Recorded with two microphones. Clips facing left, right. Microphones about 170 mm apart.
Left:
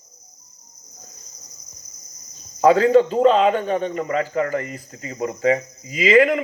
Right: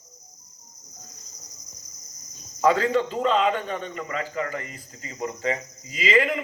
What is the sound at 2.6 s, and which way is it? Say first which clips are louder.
Speech: left 7 dB; 45° left (ahead or behind).